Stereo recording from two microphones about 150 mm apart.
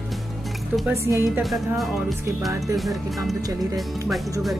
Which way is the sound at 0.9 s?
20° right (ahead or behind).